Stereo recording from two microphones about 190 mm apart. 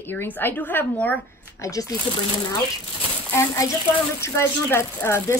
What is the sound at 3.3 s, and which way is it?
A woman's voice, 15° left (ahead or behind).